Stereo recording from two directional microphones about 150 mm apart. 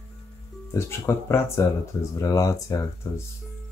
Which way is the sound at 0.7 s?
15° left (ahead or behind).